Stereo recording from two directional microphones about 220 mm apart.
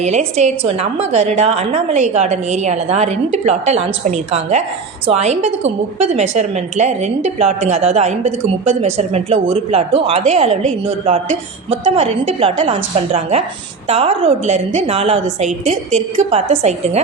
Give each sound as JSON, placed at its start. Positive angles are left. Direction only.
{"t": 0.0, "sound": "a woman's voice", "side_deg": -30}